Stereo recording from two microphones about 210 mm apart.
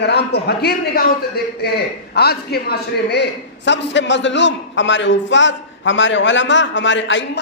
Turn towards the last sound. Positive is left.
turn(degrees=60)  # may be behind; listen again after turning